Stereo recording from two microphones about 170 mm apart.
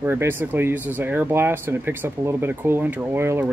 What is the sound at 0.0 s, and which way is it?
Speech, 15° right (ahead or behind).